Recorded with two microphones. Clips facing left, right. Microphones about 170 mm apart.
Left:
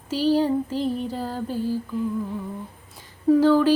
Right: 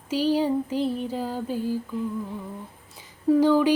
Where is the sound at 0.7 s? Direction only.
35° left (ahead or behind).